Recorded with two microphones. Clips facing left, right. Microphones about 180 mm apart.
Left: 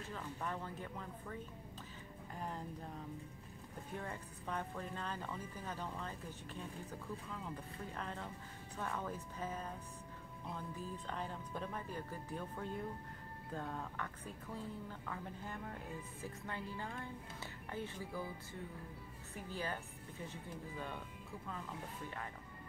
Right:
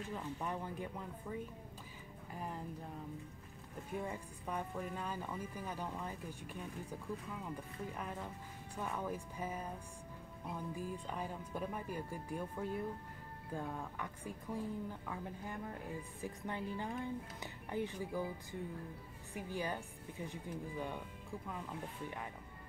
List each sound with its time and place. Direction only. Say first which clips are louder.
0.1 s speech: right 1 dB; 15° right (ahead or behind)
4.0 s speech: right 3 dB; 10° right (ahead or behind)